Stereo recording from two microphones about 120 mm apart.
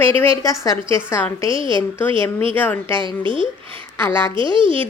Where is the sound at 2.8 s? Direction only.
45° right (ahead or behind).